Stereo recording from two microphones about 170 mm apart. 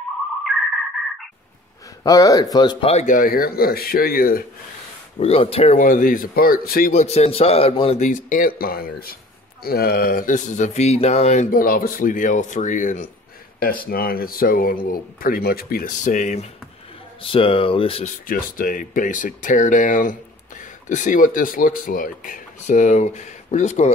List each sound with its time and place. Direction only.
2.0 s speech: 20° left (ahead or behind); by 3.2 s 40° left (ahead or behind)
3.2 s speech: 60° left (ahead or behind)
5.2 s a man's voice: 35° left (ahead or behind)
5.8 s speech: 50° left (ahead or behind)
6.9 s a man's voice: 40° left (ahead or behind)
8.0 s speech: 50° left (ahead or behind)
11.5 s speech: 55° left (ahead or behind)
13.8 s speech: 60° left (ahead or behind)
17.2 s a man's voice: 30° left (ahead or behind)
18.2 s speech: 55° left (ahead or behind)